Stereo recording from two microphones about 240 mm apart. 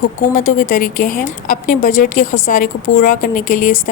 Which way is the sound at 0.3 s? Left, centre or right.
Left.